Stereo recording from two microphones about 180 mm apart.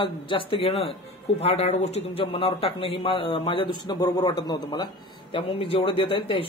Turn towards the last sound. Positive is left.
turn(degrees=30)  # may be behind; listen again after turning